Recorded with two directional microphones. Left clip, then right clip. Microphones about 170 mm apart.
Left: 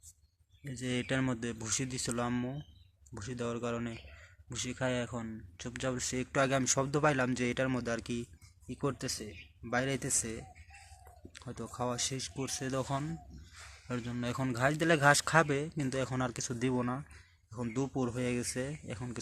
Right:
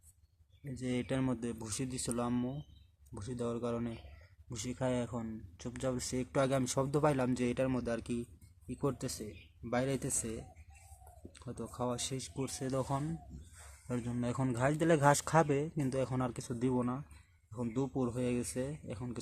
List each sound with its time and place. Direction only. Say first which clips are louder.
0.6 s speech: left 2 dB; 10° right (ahead or behind)
11.5 s speech: left 2 dB; centre (ahead or behind)
14.2 s speech: left 2 dB; 15° right (ahead or behind); by 19.2 s centre (ahead or behind)